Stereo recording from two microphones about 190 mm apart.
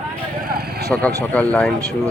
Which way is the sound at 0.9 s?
Centre (ahead or behind).